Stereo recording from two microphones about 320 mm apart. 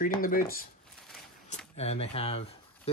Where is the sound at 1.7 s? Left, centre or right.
Centre.